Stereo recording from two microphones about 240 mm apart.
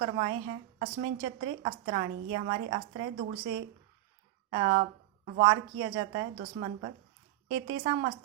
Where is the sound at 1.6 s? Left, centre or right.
Right.